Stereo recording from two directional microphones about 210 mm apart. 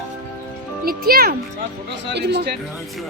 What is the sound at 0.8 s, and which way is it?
A child's voice, 45° right (ahead or behind).